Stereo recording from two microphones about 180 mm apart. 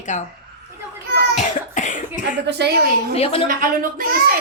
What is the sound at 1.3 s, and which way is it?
Cough, 45° left (ahead or behind).